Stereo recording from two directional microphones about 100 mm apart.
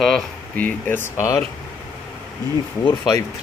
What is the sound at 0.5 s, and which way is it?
Speech, 15° left (ahead or behind).